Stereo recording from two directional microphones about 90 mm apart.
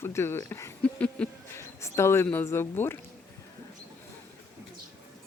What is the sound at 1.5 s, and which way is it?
Speech, 30° left (ahead or behind).